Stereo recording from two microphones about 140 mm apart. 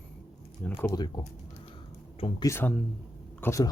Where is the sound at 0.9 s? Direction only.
30° left (ahead or behind).